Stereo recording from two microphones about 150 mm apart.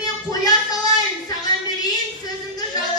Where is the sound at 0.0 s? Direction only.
25° left (ahead or behind).